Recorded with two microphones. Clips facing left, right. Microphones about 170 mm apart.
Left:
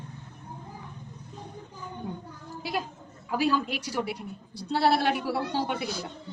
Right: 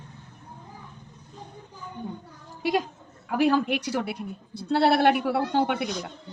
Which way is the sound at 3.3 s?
60° right (ahead or behind).